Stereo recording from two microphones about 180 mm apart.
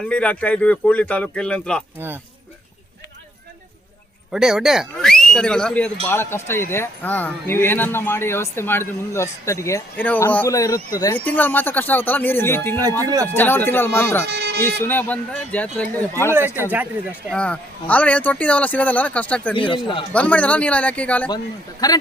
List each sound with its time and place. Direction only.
0.1 s speech: 5° left (ahead or behind)
4.3 s speech: 5° right (ahead or behind)
13.0 s speech: 20° right (ahead or behind)
13.2 s speech: 10° left (ahead or behind)
14.3 s music: 65° right (ahead or behind)
14.6 s speech: 10° left (ahead or behind)
16.6 s speech: 10° right (ahead or behind)
17.3 s speech: 5° left (ahead or behind)
19.5 s a man's voice: 30° left (ahead or behind)
20.1 s speech: 10° left (ahead or behind)
21.2 s a man's voice: 20° left (ahead or behind)